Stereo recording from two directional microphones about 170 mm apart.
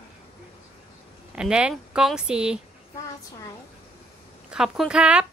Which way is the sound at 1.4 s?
5° right (ahead or behind).